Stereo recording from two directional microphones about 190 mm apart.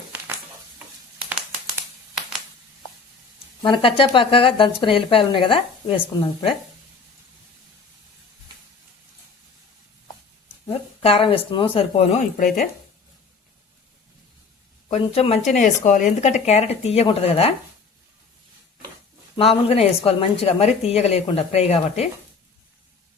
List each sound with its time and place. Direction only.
1.3 s a sound: 5° right (ahead or behind)
3.6 s speech: 25° left (ahead or behind)
11.0 s speech: 30° left (ahead or behind)
14.8 s a woman's voice: 30° left (ahead or behind)
19.4 s a woman's voice: 30° left (ahead or behind)